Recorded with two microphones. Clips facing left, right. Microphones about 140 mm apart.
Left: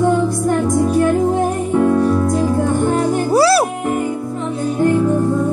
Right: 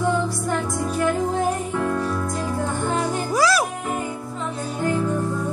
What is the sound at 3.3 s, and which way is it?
Music, 35° left (ahead or behind).